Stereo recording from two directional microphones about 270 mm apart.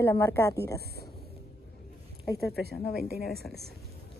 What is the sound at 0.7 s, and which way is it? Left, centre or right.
Speech, right.